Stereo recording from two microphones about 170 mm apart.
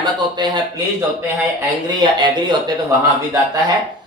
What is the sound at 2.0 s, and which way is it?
Speech, 25° right (ahead or behind).